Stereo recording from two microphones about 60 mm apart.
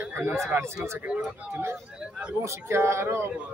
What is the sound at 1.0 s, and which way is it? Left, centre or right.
Speech, right.